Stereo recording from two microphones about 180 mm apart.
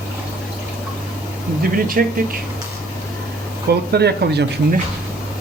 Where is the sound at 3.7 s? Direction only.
65° right (ahead or behind).